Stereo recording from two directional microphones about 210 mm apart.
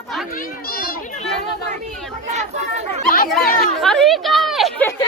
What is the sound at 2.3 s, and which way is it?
Speech, 35° right (ahead or behind).